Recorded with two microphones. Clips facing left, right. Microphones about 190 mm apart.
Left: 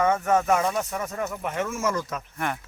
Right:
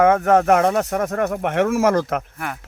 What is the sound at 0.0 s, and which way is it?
Speech, 70° right (ahead or behind).